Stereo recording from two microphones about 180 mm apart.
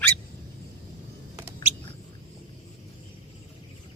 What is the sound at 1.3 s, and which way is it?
Bird, 10° right (ahead or behind).